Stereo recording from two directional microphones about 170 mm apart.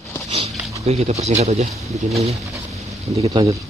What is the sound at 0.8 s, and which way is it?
Speech, 40° right (ahead or behind).